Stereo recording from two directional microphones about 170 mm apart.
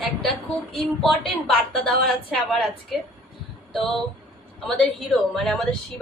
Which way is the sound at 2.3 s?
5° left (ahead or behind).